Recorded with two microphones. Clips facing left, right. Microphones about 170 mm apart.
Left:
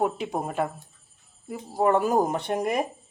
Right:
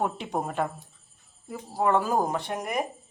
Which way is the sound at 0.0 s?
10° left (ahead or behind).